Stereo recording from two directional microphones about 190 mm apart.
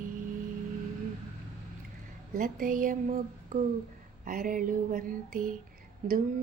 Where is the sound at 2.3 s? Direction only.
45° right (ahead or behind).